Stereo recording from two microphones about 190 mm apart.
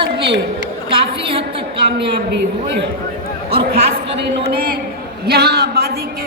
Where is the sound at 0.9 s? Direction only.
30° right (ahead or behind).